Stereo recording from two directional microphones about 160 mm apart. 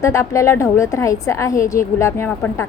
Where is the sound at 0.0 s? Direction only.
20° left (ahead or behind).